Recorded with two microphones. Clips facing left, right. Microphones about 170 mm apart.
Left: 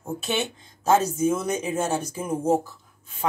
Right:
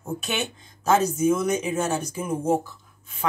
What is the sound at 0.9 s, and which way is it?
Speech, 30° left (ahead or behind).